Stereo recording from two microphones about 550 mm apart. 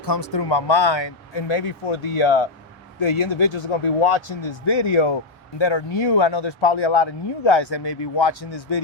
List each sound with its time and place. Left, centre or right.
0.0 s speech: left